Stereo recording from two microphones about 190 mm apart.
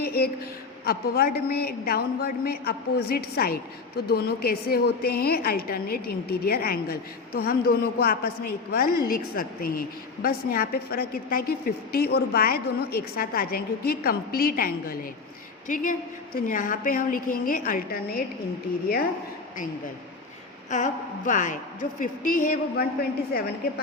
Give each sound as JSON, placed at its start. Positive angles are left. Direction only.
{"t": 0.0, "sound": "a sound", "side_deg": 55}
{"t": 0.9, "sound": "a man's voice", "side_deg": 50}
{"t": 20.7, "sound": "a man's voice", "side_deg": 40}
{"t": 23.3, "sound": "a woman's voice", "side_deg": 55}